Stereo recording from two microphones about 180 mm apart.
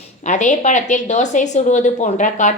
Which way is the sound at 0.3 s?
40° left (ahead or behind).